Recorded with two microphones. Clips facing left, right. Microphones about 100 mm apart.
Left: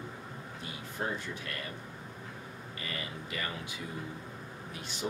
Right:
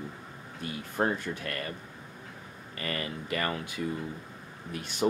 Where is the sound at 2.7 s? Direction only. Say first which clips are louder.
Right 7 dB; 55° right (ahead or behind).